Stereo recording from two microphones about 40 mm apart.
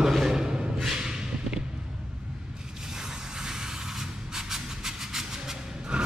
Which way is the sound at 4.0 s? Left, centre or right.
Centre.